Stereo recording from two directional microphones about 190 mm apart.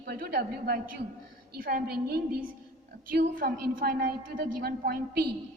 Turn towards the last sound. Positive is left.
turn(degrees=-55)  # may be behind; listen again after turning